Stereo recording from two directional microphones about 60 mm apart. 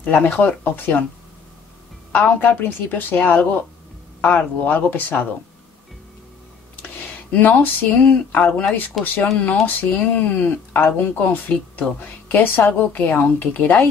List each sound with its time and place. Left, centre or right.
0.0 s a woman's voice: left
2.1 s a woman's voice: left
6.8 s a woman's voice: left